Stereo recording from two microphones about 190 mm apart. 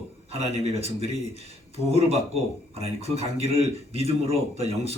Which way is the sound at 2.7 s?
30° right (ahead or behind).